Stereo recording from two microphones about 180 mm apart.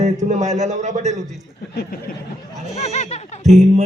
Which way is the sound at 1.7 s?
60° left (ahead or behind).